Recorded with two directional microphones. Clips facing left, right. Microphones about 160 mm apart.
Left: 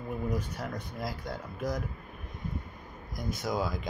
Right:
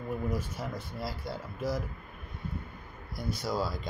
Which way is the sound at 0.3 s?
10° right (ahead or behind).